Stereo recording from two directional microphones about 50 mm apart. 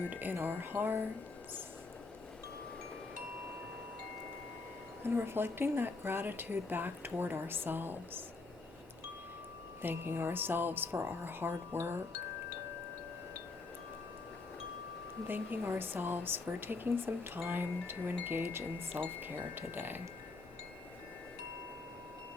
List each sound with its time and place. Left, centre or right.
0.0 s speech: right
5.0 s speech: right
9.8 s speech: right
15.3 s speech: right